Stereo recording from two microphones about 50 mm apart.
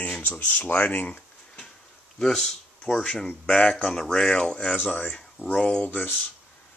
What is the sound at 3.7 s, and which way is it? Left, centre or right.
Speech, centre.